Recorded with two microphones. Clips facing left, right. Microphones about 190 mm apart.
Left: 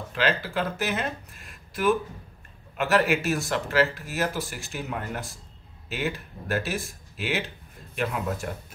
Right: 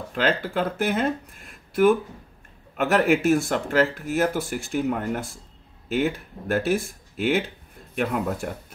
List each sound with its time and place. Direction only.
0.1 s speech: 50° right (ahead or behind)
2.8 s speech: 55° right (ahead or behind)